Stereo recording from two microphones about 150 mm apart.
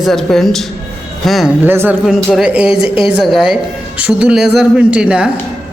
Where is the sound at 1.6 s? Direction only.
15° right (ahead or behind).